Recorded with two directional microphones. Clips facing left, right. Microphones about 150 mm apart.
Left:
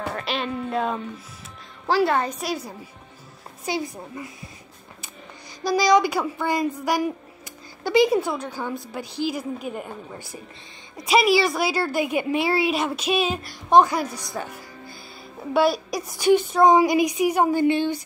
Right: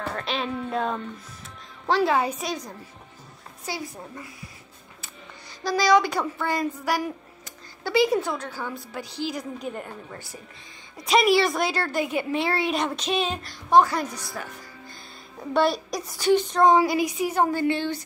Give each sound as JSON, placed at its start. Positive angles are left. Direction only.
{"t": 0.0, "sound": "a woman's voice", "side_deg": 5}
{"t": 3.7, "sound": "a woman's voice", "side_deg": 20}
{"t": 5.6, "sound": "a woman's voice", "side_deg": 15}
{"t": 11.1, "sound": "a woman's voice", "side_deg": 5}
{"t": 15.5, "sound": "a woman's voice", "side_deg": 5}